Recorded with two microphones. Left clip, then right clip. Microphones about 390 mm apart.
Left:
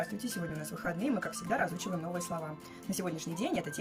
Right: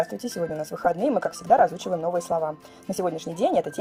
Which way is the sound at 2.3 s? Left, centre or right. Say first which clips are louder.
Right 16 dB; right.